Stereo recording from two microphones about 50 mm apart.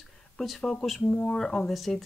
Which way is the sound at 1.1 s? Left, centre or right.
Left.